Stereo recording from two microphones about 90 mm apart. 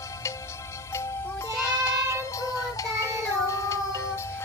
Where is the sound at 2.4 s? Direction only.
40° left (ahead or behind).